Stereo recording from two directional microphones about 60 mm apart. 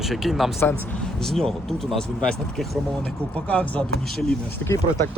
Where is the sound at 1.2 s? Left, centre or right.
Centre.